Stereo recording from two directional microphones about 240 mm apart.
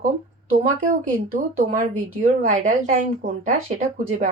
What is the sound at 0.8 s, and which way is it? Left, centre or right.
Speech, right.